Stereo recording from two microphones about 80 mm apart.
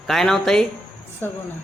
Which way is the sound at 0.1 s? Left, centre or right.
Centre.